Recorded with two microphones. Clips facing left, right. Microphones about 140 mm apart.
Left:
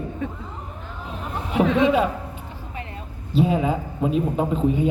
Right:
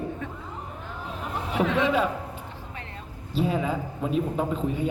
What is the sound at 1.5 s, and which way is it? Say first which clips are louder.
Speech: left 5 dB; 10° left (ahead or behind).